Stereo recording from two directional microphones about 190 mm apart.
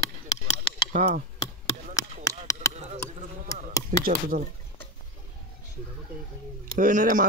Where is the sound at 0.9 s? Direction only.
45° right (ahead or behind).